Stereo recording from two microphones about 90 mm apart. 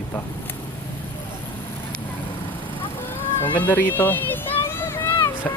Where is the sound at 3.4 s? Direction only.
20° left (ahead or behind).